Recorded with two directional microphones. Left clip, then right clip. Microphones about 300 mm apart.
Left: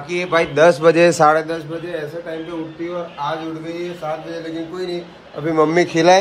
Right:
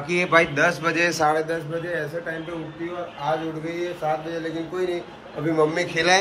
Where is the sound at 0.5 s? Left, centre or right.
Left.